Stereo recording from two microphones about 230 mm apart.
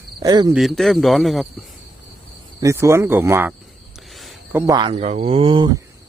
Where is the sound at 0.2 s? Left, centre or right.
Centre.